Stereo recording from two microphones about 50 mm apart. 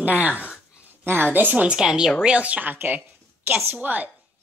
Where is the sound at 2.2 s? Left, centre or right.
Right.